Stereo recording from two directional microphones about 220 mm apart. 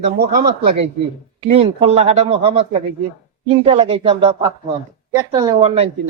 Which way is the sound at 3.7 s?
25° right (ahead or behind).